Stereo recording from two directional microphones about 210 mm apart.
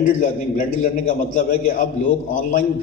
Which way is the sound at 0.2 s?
40° left (ahead or behind).